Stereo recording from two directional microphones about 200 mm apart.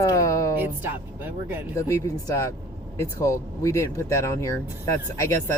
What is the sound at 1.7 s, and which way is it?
Speech, 15° left (ahead or behind).